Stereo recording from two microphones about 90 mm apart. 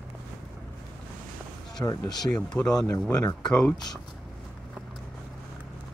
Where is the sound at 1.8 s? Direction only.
45° left (ahead or behind).